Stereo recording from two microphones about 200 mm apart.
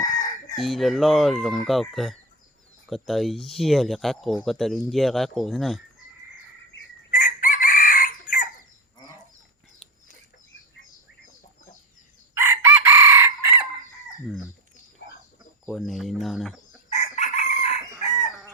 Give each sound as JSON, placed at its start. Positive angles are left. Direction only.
{"t": 0.5, "sound": "speech", "side_deg": 0}
{"t": 7.1, "sound": "chicken", "side_deg": 40}
{"t": 12.3, "sound": "chicken", "side_deg": -15}
{"t": 15.6, "sound": "bird", "side_deg": 0}
{"t": 16.9, "sound": "chicken", "side_deg": 35}